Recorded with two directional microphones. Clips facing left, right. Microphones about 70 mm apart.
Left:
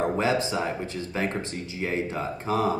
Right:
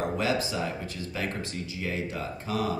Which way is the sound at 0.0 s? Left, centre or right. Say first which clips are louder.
Left 4 dB; left.